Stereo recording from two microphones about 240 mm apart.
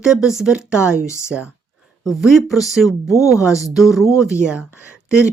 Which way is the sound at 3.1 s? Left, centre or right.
Centre.